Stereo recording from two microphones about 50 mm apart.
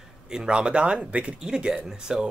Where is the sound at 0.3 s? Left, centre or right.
Centre.